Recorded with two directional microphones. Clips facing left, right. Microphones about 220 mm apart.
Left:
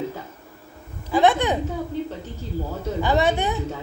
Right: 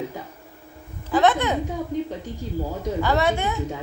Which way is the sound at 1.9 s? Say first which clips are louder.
Right 3 dB; 15° right (ahead or behind).